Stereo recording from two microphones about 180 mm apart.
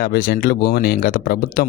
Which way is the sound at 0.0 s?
55° left (ahead or behind).